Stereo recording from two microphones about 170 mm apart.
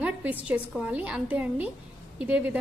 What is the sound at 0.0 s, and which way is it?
A woman's voice, 10° right (ahead or behind).